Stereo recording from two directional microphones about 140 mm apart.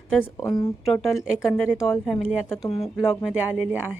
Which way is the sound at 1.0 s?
Centre (ahead or behind).